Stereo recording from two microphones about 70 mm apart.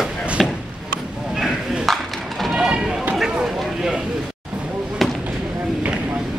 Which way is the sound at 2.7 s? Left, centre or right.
Centre.